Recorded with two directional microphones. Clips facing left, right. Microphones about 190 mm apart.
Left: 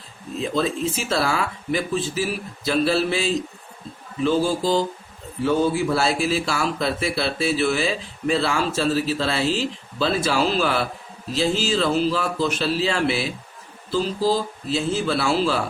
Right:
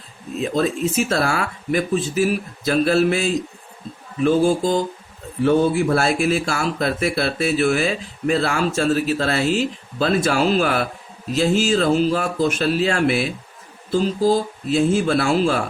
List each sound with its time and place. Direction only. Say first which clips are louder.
0.5 s speech: right 4 dB; 50° right (ahead or behind)